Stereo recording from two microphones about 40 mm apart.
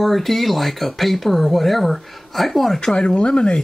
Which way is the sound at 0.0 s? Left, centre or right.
Centre.